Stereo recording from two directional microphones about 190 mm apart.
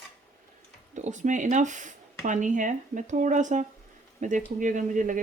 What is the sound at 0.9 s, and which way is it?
Speech, 40° right (ahead or behind).